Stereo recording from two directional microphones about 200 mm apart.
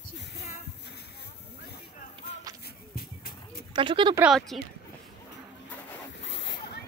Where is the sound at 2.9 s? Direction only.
50° left (ahead or behind).